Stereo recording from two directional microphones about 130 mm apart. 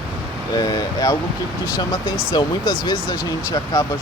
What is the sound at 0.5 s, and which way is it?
Speech, 30° left (ahead or behind).